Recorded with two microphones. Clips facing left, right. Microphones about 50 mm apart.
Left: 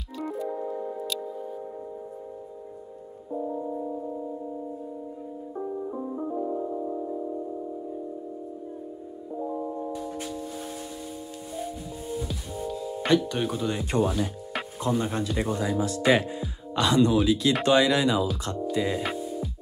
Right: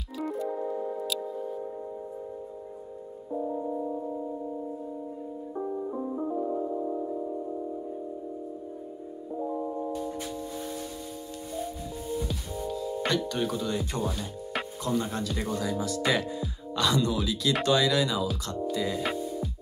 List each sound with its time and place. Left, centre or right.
0.2 s music: centre
3.3 s music: centre
5.9 s music: centre
9.4 s music: centre
9.9 s music: left
11.5 s music: left
13.3 s speech: left
19.1 s music: left